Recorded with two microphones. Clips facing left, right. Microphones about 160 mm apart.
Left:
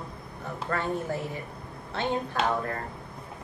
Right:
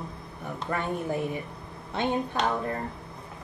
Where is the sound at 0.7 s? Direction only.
15° right (ahead or behind).